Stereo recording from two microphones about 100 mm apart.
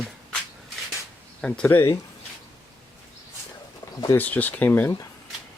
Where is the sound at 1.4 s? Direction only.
10° left (ahead or behind).